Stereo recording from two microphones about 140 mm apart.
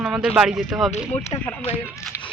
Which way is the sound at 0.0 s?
15° right (ahead or behind).